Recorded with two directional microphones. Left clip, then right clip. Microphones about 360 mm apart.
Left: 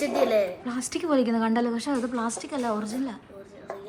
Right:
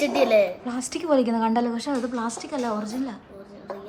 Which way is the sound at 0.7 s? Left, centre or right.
Centre.